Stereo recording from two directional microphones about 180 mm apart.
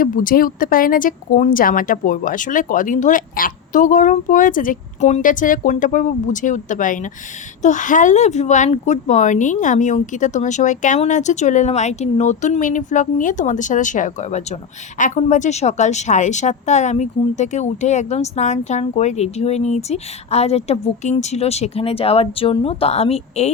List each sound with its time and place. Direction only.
0.0 s speech: 50° left (ahead or behind); by 23.5 s 35° left (ahead or behind)